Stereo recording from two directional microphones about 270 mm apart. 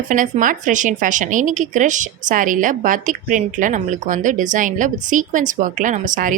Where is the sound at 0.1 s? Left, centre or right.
Right.